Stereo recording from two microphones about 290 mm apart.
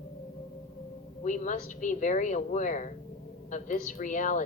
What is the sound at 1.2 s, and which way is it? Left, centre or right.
A woman's voice, left.